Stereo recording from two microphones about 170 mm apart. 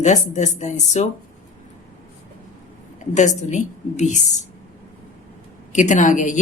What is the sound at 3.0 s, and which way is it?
Speech, 45° left (ahead or behind).